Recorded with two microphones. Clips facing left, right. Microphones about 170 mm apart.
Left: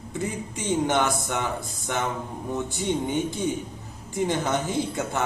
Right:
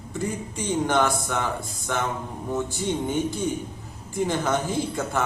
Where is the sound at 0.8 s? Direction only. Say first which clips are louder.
Right 3 dB; 20° left (ahead or behind).